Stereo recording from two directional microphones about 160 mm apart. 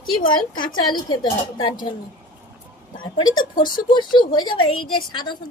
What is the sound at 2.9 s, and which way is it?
Speech, 30° left (ahead or behind).